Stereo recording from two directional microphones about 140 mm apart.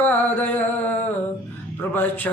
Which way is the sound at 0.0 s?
10° left (ahead or behind).